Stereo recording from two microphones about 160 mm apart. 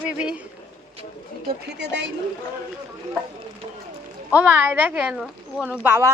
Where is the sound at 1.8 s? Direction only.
90° right.